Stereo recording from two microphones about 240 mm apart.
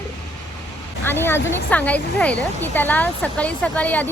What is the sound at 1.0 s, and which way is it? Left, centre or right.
A woman's voice, centre.